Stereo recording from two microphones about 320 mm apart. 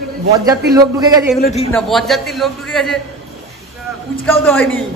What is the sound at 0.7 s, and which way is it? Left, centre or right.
Speech, centre.